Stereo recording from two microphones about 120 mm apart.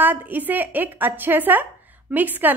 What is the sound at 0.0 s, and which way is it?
A woman's voice, 15° right (ahead or behind).